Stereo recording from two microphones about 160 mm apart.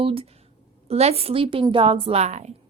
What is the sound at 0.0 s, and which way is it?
A woman's voice, 35° right (ahead or behind).